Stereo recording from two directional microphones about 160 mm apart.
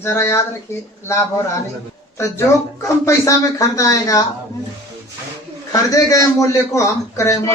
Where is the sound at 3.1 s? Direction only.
20° left (ahead or behind).